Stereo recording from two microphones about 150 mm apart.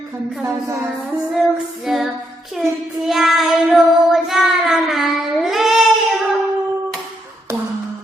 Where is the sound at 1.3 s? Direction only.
Centre (ahead or behind).